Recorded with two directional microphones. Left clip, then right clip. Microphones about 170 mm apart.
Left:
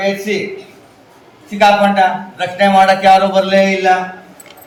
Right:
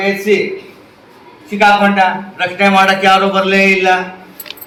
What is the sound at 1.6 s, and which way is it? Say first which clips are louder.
A man's voice: even; 15° left (ahead or behind).